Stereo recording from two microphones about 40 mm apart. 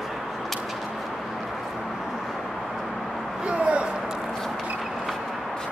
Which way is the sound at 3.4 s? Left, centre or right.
Right.